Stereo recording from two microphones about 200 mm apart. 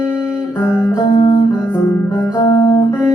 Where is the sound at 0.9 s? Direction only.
20° left (ahead or behind).